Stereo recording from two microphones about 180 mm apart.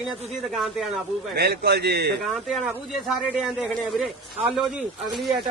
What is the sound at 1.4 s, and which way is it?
Speech, 65° right (ahead or behind).